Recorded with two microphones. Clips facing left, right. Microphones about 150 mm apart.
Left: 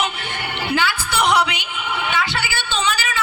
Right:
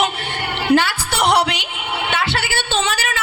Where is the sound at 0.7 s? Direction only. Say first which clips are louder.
Right 6 dB; 60° right (ahead or behind).